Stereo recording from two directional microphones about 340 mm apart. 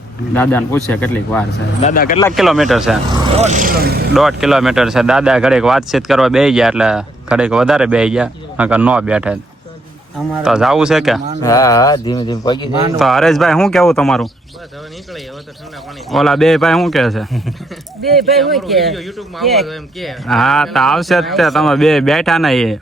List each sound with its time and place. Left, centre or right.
0.3 s speech: centre
1.8 s speech: left
2.1 s speech: centre
3.4 s speech: right
4.1 s speech: centre
11.4 s mantra: centre
13.0 s speech: centre
16.0 s speech: centre